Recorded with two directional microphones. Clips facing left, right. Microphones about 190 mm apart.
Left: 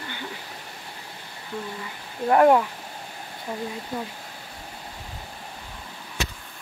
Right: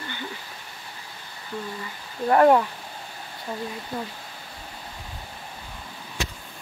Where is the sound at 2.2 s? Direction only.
5° left (ahead or behind).